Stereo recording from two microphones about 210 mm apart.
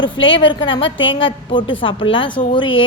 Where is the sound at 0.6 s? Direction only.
20° left (ahead or behind).